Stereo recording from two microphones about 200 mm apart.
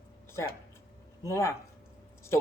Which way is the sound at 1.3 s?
15° left (ahead or behind).